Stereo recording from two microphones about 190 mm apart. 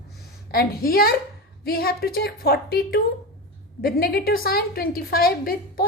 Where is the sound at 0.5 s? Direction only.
50° left (ahead or behind).